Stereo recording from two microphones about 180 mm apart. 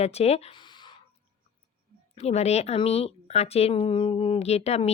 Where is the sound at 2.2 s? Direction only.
35° left (ahead or behind).